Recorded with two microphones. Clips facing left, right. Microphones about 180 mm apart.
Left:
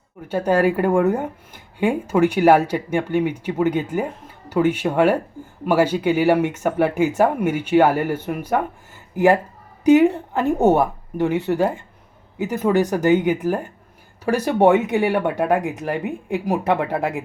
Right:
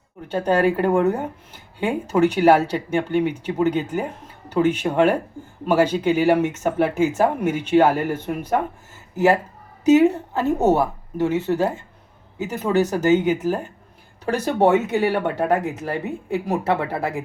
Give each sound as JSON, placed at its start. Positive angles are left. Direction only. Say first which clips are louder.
{"t": 0.3, "sound": "speech", "louder": "left 1 dB", "side_deg": 10}